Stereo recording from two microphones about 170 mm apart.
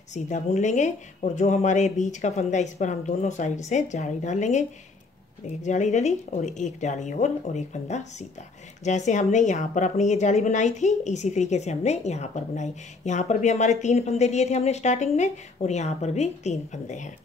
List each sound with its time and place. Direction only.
0.1 s a woman's voice: 45° left (ahead or behind)